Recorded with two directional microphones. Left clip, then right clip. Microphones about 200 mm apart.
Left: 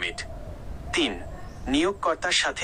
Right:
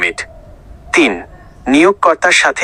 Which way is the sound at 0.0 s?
40° right (ahead or behind).